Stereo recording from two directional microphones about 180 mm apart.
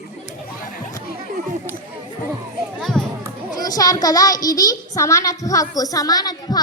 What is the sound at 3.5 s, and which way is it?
A woman's voice, 20° left (ahead or behind).